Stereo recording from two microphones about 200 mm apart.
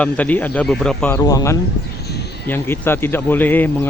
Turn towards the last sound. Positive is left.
turn(degrees=10)  # may be behind; listen again after turning